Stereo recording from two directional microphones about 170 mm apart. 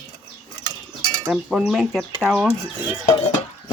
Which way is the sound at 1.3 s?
5° right (ahead or behind).